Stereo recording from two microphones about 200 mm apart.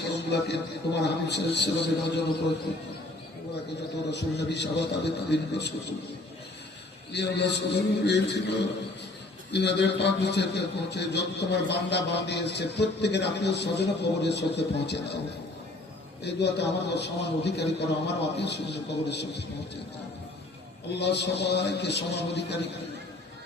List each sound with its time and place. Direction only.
0.1 s a sound: 55° left (ahead or behind)
1.0 s a man's voice: 55° left (ahead or behind)
4.1 s a man's voice: 60° left (ahead or behind)
7.1 s a man's voice: 60° left (ahead or behind)
16.2 s a man's voice: 55° left (ahead or behind)
20.9 s a man's voice: 55° left (ahead or behind)